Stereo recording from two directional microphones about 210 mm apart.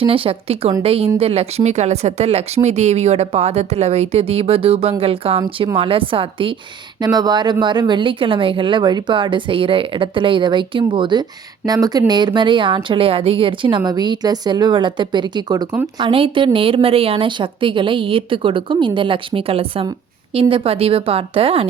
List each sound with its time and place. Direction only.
0.0 s speech: 25° right (ahead or behind)